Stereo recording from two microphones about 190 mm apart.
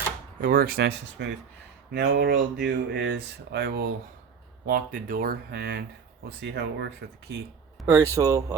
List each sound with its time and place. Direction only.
0.4 s speech: 50° right (ahead or behind)
7.9 s speech: 15° right (ahead or behind)